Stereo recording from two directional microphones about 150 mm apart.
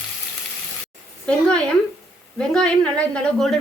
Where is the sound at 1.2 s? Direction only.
5° left (ahead or behind).